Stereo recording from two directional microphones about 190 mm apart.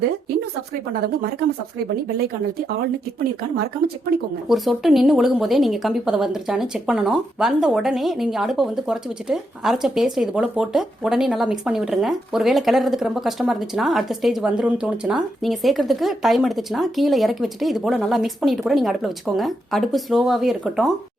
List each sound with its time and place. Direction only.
2.1 s speech: 55° right (ahead or behind)
4.4 s a woman's voice: centre (ahead or behind)